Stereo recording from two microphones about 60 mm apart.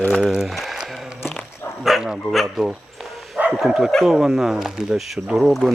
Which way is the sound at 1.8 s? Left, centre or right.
Centre.